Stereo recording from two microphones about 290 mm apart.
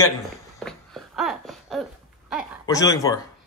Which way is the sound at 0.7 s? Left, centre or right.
Centre.